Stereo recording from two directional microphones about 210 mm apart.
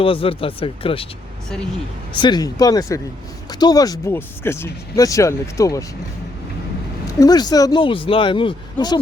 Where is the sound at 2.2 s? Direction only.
20° left (ahead or behind).